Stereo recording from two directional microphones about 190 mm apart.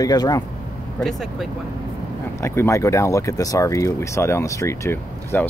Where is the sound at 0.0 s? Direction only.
20° left (ahead or behind).